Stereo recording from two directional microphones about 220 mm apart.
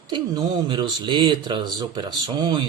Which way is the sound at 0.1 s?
20° right (ahead or behind).